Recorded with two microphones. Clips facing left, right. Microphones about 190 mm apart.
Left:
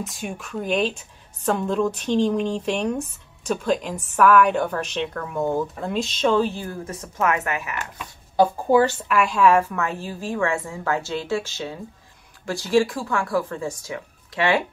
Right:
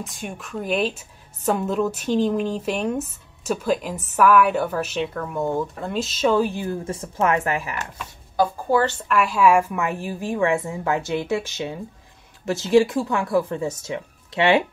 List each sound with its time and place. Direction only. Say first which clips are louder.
0.0 s a woman's voice: left 2 dB; centre (ahead or behind); by 7.7 s 30° right (ahead or behind)
8.7 s speech: left 3 dB; 10° left (ahead or behind)
9.1 s a woman's voice: right 1 dB; 5° right (ahead or behind); by 14.6 s 20° right (ahead or behind)